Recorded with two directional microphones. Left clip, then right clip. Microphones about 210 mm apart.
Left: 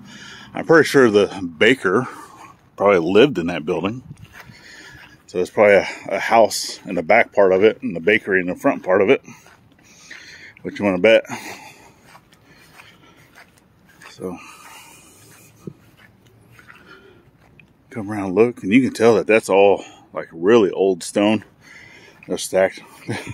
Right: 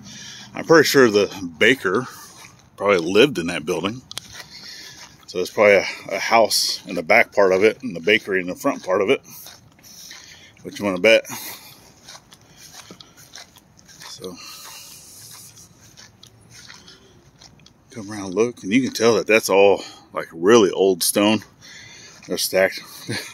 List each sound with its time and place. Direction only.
0.0 s speech: 35° left (ahead or behind)
4.5 s a sound: 30° left (ahead or behind)
5.3 s speech: 35° left (ahead or behind)
9.9 s a sound: 50° left (ahead or behind)
14.1 s dog: 45° left (ahead or behind)
17.9 s speech: 45° left (ahead or behind); by 23.3 s 25° left (ahead or behind)